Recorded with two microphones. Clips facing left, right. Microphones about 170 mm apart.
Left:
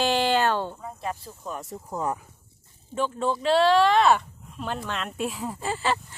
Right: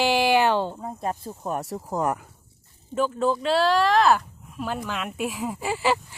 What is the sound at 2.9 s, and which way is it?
Speech, centre (ahead or behind).